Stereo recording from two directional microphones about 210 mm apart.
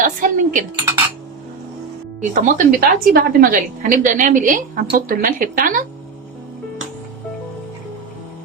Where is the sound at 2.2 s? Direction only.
40° right (ahead or behind).